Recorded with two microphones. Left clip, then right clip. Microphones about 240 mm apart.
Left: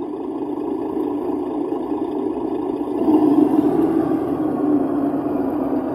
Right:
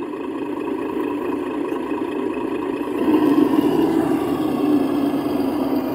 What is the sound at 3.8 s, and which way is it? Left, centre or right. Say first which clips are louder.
Vehicle: even; right.